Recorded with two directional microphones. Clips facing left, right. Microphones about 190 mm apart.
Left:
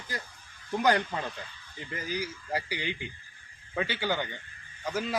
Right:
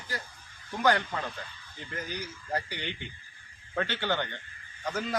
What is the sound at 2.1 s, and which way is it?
A man's voice, 10° left (ahead or behind).